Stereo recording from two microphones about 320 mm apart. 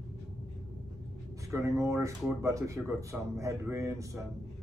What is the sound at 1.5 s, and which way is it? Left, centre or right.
Speech, centre.